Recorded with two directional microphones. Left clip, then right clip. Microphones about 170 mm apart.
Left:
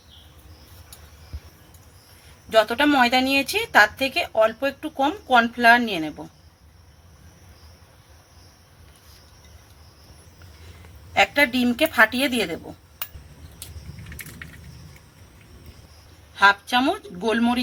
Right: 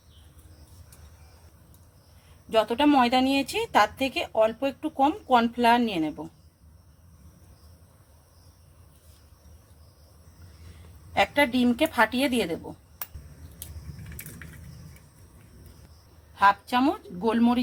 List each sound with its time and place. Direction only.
2.5 s a woman's voice: 15° right (ahead or behind)
11.1 s a woman's voice: 15° right (ahead or behind)
16.3 s a woman's voice: 15° right (ahead or behind)